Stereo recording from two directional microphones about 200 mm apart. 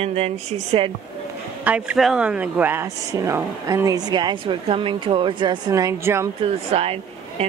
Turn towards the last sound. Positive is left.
turn(degrees=-30)  # may be behind; listen again after turning